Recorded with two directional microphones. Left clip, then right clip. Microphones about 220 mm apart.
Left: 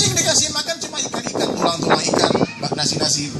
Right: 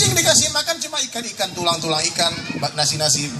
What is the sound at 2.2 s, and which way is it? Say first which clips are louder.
Speech: left 3 dB; 15° right (ahead or behind).